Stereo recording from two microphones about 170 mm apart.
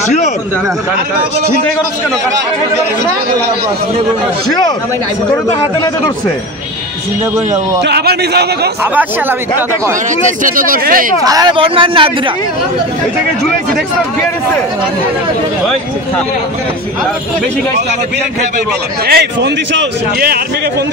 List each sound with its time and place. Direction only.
7.8 s a man's voice: 70° right (ahead or behind)
10.2 s speech: 55° right (ahead or behind)
11.2 s speech: 25° right (ahead or behind)
19.0 s speech: 70° right (ahead or behind)